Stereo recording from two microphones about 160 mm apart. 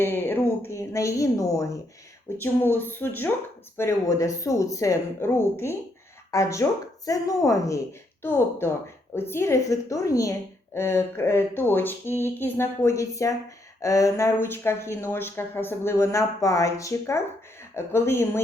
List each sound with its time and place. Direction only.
0.0 s speech: 15° left (ahead or behind)